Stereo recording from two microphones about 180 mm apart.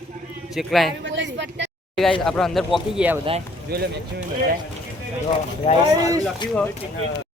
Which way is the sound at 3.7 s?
60° right (ahead or behind).